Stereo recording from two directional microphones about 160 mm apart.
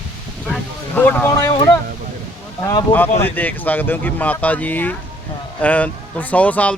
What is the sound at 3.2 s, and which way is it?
Speech, 10° left (ahead or behind).